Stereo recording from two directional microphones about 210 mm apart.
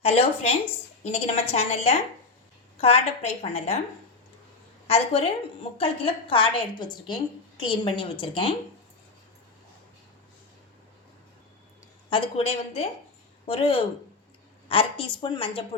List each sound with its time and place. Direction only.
0.0 s a woman's voice: 30° left (ahead or behind)
4.9 s a woman's voice: 30° left (ahead or behind)
12.1 s a woman's voice: 25° left (ahead or behind)